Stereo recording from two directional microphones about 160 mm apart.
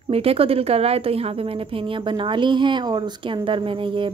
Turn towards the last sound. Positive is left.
turn(degrees=-30)  # may be behind; listen again after turning